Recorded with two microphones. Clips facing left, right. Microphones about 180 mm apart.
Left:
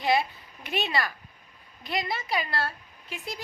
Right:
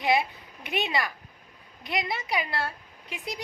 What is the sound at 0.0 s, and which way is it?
A woman's voice, 20° right (ahead or behind).